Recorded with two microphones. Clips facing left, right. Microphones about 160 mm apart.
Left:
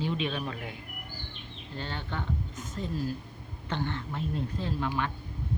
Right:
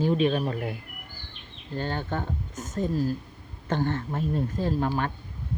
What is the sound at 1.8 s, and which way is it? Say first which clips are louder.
Speech: right 7 dB; 45° right (ahead or behind).